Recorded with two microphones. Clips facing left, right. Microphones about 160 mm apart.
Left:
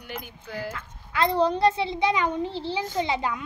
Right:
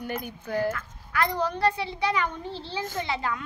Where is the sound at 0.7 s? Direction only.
25° left (ahead or behind).